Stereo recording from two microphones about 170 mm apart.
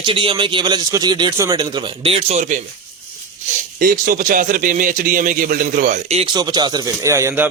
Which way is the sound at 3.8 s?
55° right (ahead or behind).